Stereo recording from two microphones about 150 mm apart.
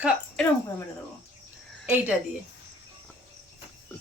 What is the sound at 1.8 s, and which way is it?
Speech, 10° right (ahead or behind).